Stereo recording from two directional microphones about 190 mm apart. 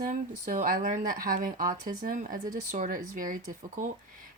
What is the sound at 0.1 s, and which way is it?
Speech, 45° right (ahead or behind).